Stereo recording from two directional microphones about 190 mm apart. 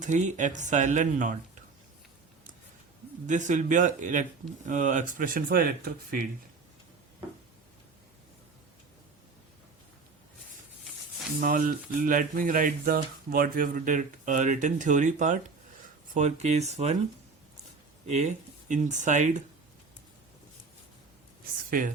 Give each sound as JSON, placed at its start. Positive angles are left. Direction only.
{"t": 0.0, "sound": "speech", "side_deg": -40}
{"t": 3.2, "sound": "speech", "side_deg": -40}
{"t": 11.3, "sound": "speech", "side_deg": -45}
{"t": 18.0, "sound": "speech", "side_deg": -35}
{"t": 21.7, "sound": "speech", "side_deg": -45}